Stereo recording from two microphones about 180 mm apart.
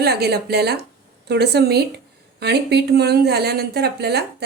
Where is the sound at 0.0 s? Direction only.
60° right (ahead or behind).